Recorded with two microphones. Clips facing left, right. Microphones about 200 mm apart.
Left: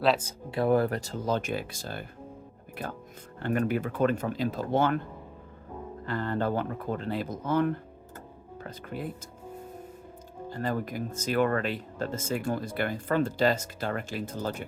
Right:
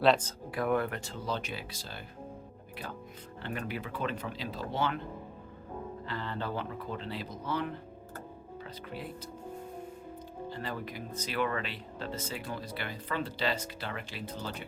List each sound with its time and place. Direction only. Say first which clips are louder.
0.0 s speech: even; centre (ahead or behind)
0.5 s speech: left 6 dB; 30° left (ahead or behind); by 2.0 s 50° left (ahead or behind)
3.4 s speech: left 10 dB; 50° left (ahead or behind)
6.1 s speech: left 9 dB; 50° left (ahead or behind)
10.5 s speech: left 9 dB; 45° left (ahead or behind)